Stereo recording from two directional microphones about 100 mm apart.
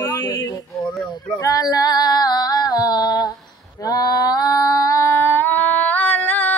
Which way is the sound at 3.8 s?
45° left (ahead or behind).